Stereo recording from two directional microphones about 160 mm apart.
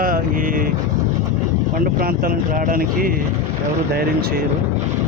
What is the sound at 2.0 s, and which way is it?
Speech, 65° right (ahead or behind).